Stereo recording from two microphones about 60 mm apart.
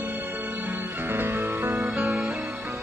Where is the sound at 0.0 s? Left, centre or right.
Right.